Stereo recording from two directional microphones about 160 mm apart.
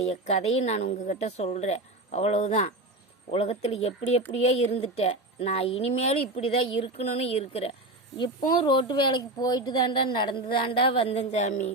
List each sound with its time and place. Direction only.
0.0 s a woman's voice: 40° left (ahead or behind)
8.2 s speech: 30° left (ahead or behind); by 11.7 s 50° left (ahead or behind)